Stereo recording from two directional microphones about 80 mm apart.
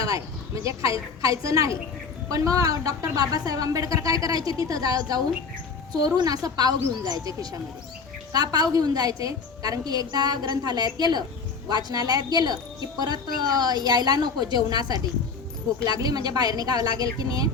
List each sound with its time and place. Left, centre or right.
0.0 s a woman's voice: right